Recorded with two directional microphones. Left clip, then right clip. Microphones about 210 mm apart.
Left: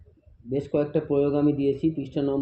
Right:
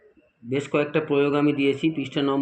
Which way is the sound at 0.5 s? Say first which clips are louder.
Right 2 dB; 30° right (ahead or behind).